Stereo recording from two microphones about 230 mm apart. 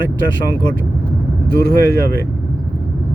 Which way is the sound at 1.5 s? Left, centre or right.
Left.